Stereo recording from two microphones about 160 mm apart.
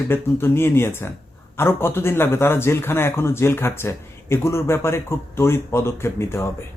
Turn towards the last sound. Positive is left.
turn(degrees=15)  # may be behind; listen again after turning